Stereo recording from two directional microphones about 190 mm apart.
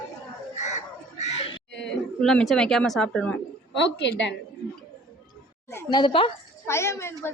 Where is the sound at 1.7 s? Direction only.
70° left (ahead or behind).